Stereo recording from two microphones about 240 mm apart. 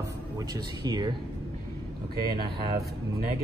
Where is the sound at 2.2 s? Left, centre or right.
Centre.